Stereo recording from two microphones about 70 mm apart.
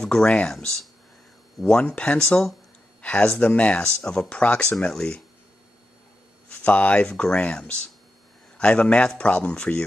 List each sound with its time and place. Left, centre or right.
0.0 s speech: centre
6.5 s speech: left